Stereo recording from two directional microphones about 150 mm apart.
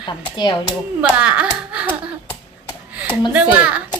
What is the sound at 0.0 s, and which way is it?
Speech, 30° left (ahead or behind).